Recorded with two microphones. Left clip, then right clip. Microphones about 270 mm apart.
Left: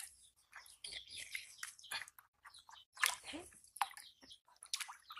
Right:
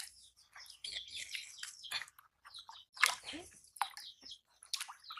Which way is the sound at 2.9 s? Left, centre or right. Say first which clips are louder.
Right 5 dB; centre.